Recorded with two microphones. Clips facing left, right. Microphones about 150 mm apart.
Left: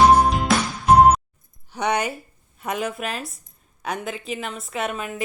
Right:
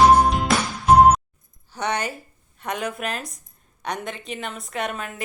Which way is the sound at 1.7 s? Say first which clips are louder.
Left 3 dB; 10° left (ahead or behind).